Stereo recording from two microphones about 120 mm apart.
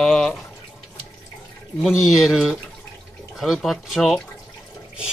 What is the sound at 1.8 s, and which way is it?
Speech, centre (ahead or behind).